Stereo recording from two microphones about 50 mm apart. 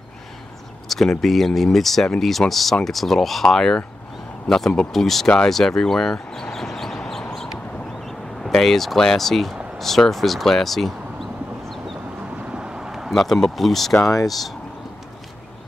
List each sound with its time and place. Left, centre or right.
0.8 s a sound: centre
1.2 s speech: centre
6.1 s speech: centre
6.5 s a sound: centre
8.0 s speech: centre
12.4 s vehicle: centre
13.1 s speech: centre